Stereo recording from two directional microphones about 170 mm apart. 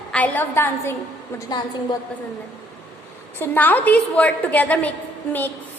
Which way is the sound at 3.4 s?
10° left (ahead or behind).